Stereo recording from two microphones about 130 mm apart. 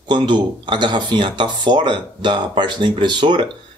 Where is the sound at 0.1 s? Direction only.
35° right (ahead or behind).